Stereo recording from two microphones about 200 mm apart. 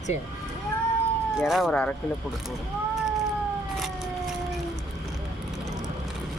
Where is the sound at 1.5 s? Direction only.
Centre (ahead or behind).